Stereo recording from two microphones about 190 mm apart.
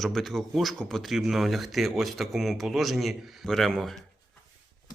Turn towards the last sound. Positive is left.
turn(degrees=0)  # may be behind; listen again after turning